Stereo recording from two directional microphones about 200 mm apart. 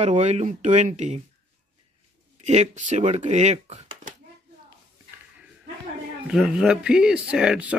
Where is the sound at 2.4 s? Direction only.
35° right (ahead or behind).